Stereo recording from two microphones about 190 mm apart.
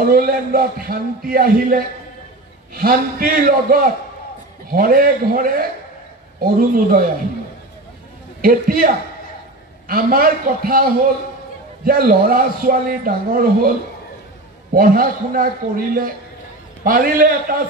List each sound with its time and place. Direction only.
0.1 s a man's voice: 50° right (ahead or behind)
8.4 s a man's voice: 50° right (ahead or behind)
14.7 s a man's voice: 50° right (ahead or behind)